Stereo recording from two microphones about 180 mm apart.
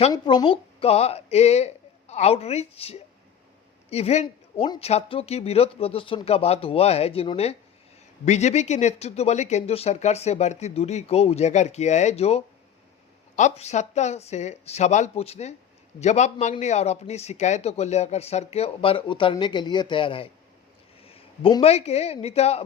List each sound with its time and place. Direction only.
0.1 s a man's voice: 25° left (ahead or behind)